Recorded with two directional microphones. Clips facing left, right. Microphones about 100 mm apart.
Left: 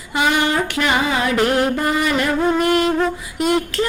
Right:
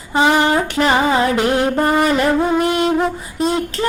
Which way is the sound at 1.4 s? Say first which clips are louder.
Right 1 dB; 20° right (ahead or behind).